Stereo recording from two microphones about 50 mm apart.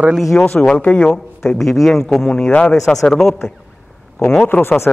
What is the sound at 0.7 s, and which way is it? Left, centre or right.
Speech, left.